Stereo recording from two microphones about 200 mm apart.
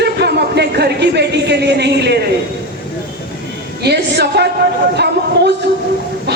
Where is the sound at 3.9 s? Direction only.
55° right (ahead or behind).